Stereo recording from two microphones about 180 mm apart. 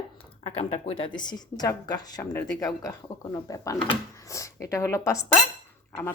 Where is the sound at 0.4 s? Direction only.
35° left (ahead or behind).